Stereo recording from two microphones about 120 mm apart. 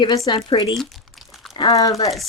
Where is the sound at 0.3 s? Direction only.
40° left (ahead or behind).